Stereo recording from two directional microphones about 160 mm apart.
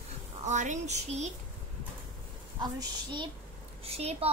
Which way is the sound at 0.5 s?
50° right (ahead or behind).